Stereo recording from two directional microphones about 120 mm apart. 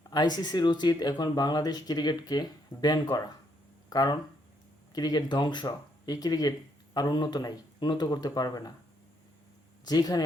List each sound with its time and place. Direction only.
0.1 s speech: 35° left (ahead or behind)
9.8 s speech: 35° left (ahead or behind)